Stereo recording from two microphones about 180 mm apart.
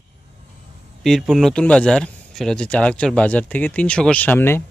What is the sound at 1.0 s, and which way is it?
Speech, centre (ahead or behind).